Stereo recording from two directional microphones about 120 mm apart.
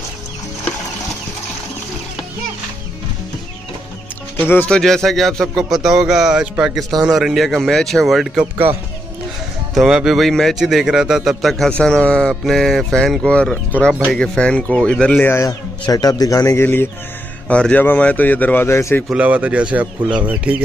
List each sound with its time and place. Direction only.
4.5 s speech: 10° left (ahead or behind)
9.8 s a man's voice: 5° right (ahead or behind); by 15.5 s 20° left (ahead or behind)
15.8 s a man's voice: 30° left (ahead or behind)
19.0 s speech: 10° right (ahead or behind)